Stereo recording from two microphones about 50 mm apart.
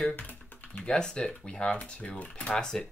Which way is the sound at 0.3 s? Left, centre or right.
Left.